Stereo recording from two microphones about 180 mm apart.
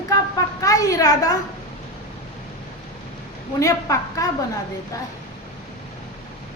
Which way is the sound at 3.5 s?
20° left (ahead or behind).